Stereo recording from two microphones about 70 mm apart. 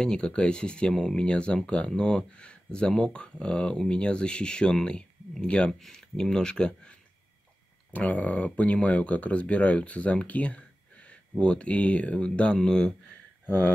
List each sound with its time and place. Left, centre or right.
0.0 s speech: centre